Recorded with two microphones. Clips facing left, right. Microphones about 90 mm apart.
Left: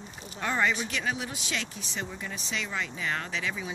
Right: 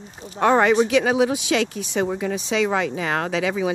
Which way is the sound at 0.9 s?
90° right.